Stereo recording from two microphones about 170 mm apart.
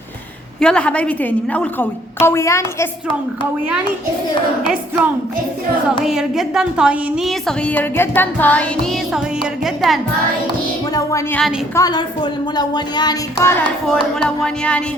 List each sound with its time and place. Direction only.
0.6 s a woman's voice: 5° left (ahead or behind)
6.1 s a woman's voice: centre (ahead or behind)
10.9 s speech: 20° left (ahead or behind)
13.8 s a woman's voice: 5° left (ahead or behind)